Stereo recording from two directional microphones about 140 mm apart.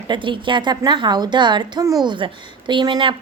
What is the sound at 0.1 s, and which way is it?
A woman's voice, 35° right (ahead or behind).